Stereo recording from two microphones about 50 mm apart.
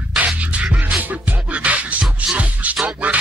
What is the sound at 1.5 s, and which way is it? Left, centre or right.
Music, right.